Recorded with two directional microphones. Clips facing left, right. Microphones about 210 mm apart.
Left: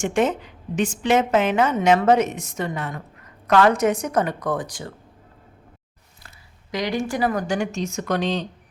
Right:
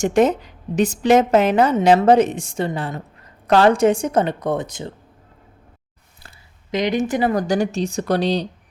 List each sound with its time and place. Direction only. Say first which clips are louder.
0.0 s a woman's voice: right 5 dB; 40° right (ahead or behind); by 4.9 s 25° right (ahead or behind)
6.7 s a woman's voice: right 5 dB; 20° right (ahead or behind)
7.3 s a woman's voice: right 5 dB; 35° right (ahead or behind)